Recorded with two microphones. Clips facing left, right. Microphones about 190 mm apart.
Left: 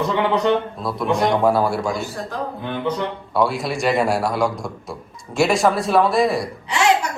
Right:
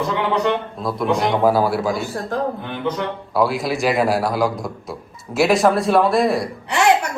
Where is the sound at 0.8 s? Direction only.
Centre (ahead or behind).